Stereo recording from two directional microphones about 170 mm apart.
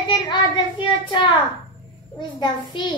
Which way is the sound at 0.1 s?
30° left (ahead or behind).